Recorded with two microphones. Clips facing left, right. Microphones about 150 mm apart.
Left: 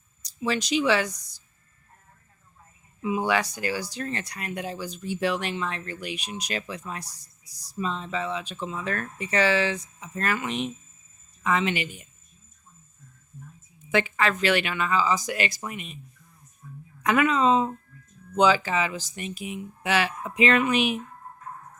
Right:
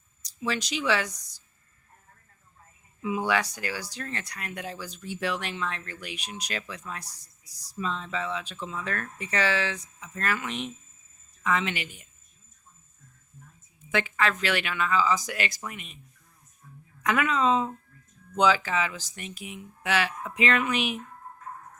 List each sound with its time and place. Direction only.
0.3 s speech: centre (ahead or behind)
3.2 s speech: 5° left (ahead or behind)
7.9 s speech: 25° left (ahead or behind); by 11.9 s 5° left (ahead or behind)
13.9 s speech: 10° left (ahead or behind)
17.1 s speech: 5° left (ahead or behind)
18.9 s speech: centre (ahead or behind)